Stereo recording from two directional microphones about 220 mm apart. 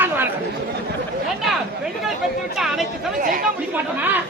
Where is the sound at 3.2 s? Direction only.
40° right (ahead or behind).